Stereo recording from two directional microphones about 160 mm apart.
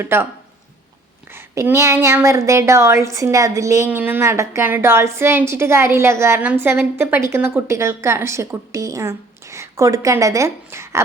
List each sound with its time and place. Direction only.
0.0 s a woman's voice: 15° right (ahead or behind)
1.3 s a woman's voice: 15° right (ahead or behind)